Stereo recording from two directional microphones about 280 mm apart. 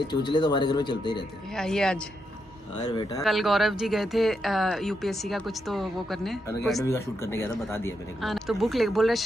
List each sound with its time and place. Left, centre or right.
0.1 s speech: centre
1.6 s speech: centre
2.9 s speech: centre
3.2 s speech: centre